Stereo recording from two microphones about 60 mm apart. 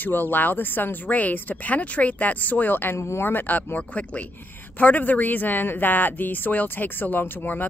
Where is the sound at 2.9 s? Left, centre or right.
Left.